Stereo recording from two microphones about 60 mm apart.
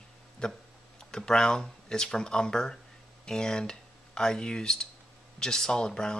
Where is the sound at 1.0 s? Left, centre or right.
Centre.